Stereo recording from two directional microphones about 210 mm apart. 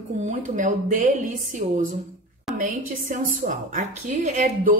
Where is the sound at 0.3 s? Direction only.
40° right (ahead or behind).